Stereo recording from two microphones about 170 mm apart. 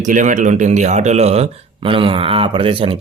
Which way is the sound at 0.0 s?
50° right (ahead or behind).